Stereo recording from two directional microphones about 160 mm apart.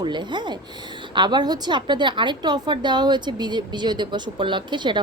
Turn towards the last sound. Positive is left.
turn(degrees=-30)  # may be behind; listen again after turning